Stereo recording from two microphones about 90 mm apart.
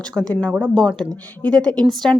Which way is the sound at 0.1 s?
5° left (ahead or behind).